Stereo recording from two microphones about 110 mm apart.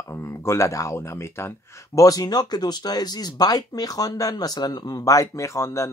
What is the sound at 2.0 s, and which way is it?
Speech, 35° left (ahead or behind).